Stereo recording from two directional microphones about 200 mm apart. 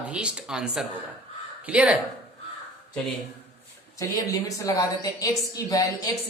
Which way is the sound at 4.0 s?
15° left (ahead or behind).